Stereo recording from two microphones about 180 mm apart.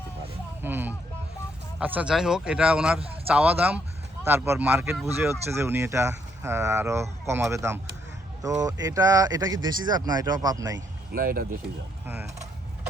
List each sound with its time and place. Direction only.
0.6 s speech: 10° right (ahead or behind)
11.1 s speech: 55° right (ahead or behind)